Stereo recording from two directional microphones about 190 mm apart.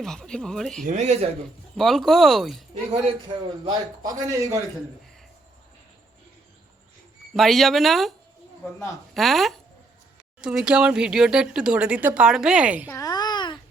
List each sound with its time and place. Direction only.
0.0 s speech: 5° left (ahead or behind)
0.9 s speech: 35° right (ahead or behind)
1.7 s speech: centre (ahead or behind)
2.9 s speech: 30° right (ahead or behind)
3.6 s a man's voice: 20° right (ahead or behind)
7.3 s speech: centre (ahead or behind)
9.1 s speech: centre (ahead or behind)
12.9 s babbling: 20° left (ahead or behind)